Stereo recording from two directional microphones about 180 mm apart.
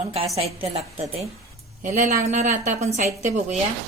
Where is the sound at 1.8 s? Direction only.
45° right (ahead or behind).